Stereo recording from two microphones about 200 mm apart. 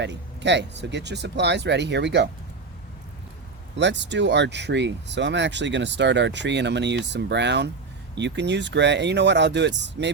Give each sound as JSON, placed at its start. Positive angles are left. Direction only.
{"t": 0.0, "sound": "speech", "side_deg": -60}
{"t": 3.8, "sound": "speech", "side_deg": -60}